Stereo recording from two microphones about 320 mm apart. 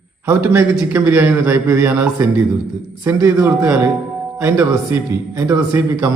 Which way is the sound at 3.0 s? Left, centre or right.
Centre.